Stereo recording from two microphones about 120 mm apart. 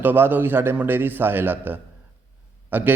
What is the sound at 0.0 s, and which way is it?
A man's voice, 15° right (ahead or behind).